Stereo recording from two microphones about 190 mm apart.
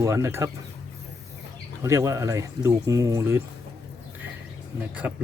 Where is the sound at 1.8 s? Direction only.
15° right (ahead or behind).